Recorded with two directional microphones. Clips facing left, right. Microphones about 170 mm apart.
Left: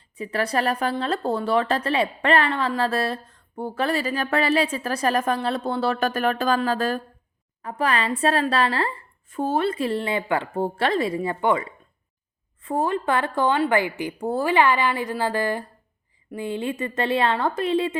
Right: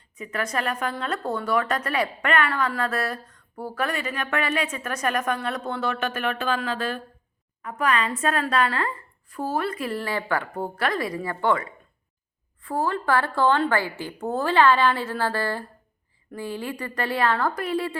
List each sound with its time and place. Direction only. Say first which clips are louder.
0.2 s a woman's voice: left 4 dB; 30° left (ahead or behind)
12.6 s a woman's voice: left 2 dB; 20° left (ahead or behind)